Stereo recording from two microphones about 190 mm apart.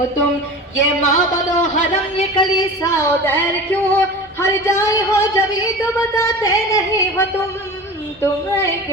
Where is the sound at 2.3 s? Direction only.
25° left (ahead or behind).